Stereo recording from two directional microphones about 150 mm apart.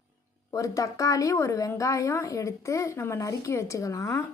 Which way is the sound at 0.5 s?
20° left (ahead or behind).